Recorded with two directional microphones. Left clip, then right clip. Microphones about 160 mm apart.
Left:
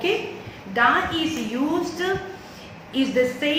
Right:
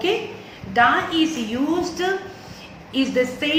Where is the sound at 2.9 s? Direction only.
15° right (ahead or behind).